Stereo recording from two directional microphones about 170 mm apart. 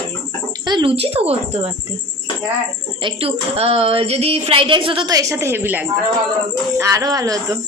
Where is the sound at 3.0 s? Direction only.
30° right (ahead or behind).